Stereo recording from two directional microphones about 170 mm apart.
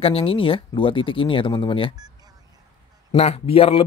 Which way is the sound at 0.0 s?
35° left (ahead or behind).